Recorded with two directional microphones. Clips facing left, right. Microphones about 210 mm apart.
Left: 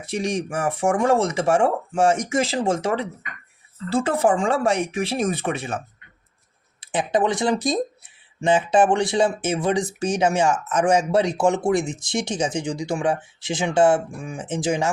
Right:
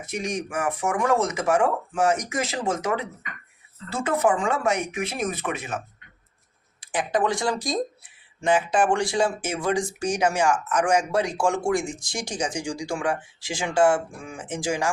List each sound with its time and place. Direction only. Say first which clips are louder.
0.0 s speech: left 4 dB; 30° left (ahead or behind)